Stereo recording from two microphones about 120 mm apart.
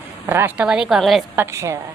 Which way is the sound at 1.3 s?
20° right (ahead or behind).